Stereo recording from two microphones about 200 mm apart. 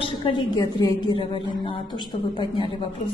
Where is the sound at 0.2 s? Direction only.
20° left (ahead or behind).